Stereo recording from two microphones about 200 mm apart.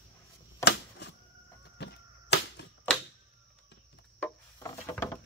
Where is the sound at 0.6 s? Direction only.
60° left (ahead or behind).